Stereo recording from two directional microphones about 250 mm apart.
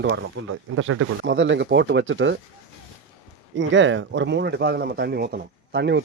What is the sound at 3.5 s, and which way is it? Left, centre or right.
Speech, right.